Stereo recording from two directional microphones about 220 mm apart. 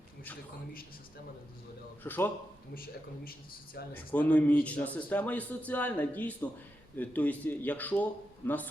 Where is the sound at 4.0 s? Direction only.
5° left (ahead or behind).